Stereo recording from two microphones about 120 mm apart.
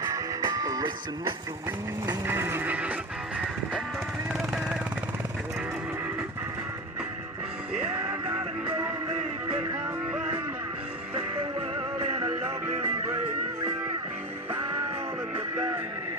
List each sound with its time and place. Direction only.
0.0 s music: 25° right (ahead or behind)
2.2 s music: 20° right (ahead or behind)
4.3 s vehicle: 5° right (ahead or behind)
8.3 s music: 20° right (ahead or behind)
11.9 s music: 50° right (ahead or behind)
12.6 s music: 20° right (ahead or behind)
15.5 s music: 25° right (ahead or behind)